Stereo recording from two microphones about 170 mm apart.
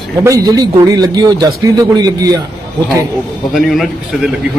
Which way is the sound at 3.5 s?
Centre (ahead or behind).